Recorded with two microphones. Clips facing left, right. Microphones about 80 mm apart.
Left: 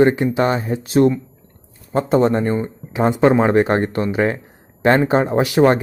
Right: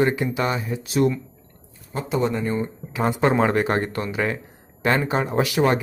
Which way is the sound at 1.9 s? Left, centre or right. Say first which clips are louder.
Left 8 dB; left.